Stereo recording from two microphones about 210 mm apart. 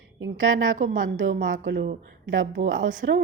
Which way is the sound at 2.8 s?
40° right (ahead or behind).